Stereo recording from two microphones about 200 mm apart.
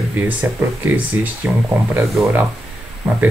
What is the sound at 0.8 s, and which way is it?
Speech, 10° right (ahead or behind).